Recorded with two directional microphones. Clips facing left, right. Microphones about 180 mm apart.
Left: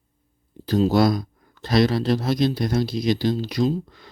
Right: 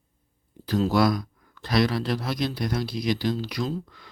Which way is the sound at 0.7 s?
25° left (ahead or behind).